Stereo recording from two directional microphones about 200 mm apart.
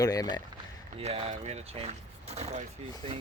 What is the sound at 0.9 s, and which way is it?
Speech, 30° right (ahead or behind).